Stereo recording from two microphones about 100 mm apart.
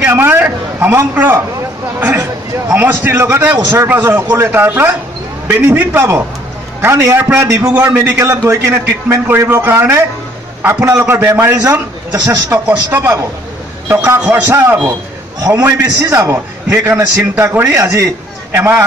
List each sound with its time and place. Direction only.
0.0 s a sound: 25° right (ahead or behind)
2.7 s a man's voice: 20° right (ahead or behind)
7.9 s a man's voice: 30° right (ahead or behind)
11.6 s a man's voice: 35° right (ahead or behind)
12.6 s a man's voice: 25° right (ahead or behind)
14.3 s a man's voice: 25° right (ahead or behind)
15.5 s a man's voice: 15° right (ahead or behind)
15.8 s a man's voice: 35° right (ahead or behind)